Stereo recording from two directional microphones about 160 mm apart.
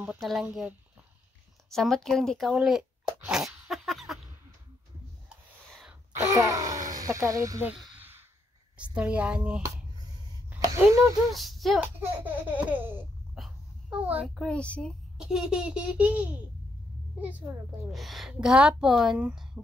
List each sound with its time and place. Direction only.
0.0 s a child's voice: 5° right (ahead or behind)
5.7 s a sound: centre (ahead or behind)
6.2 s groan: 20° right (ahead or behind)
6.9 s speech: 20° right (ahead or behind)
7.7 s a sound: 10° right (ahead or behind)
8.7 s speech: 10° right (ahead or behind)
10.6 s speech: 20° right (ahead or behind)
11.3 s speech: centre (ahead or behind)
12.0 s speech: 10° right (ahead or behind)
13.4 s a sound: 5° right (ahead or behind)
14.3 s a child's voice: 5° left (ahead or behind)
17.9 s a child's voice: centre (ahead or behind)